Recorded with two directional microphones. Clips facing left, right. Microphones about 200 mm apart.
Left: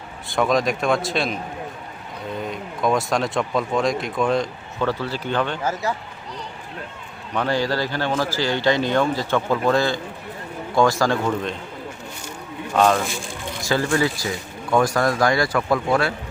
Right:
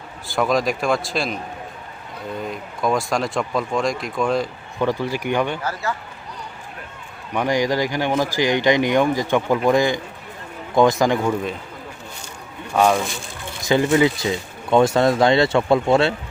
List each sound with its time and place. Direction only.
0.3 s speech: centre (ahead or behind)
2.4 s speech: centre (ahead or behind)
4.8 s speech: 15° right (ahead or behind)
7.3 s speech: 15° right (ahead or behind)
12.7 s speech: 10° right (ahead or behind); by 16.1 s 25° right (ahead or behind)